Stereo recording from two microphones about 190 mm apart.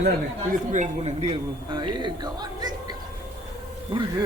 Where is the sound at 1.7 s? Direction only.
25° right (ahead or behind).